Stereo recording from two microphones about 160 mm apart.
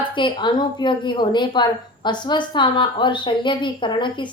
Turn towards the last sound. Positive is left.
turn(degrees=30)  # may be behind; listen again after turning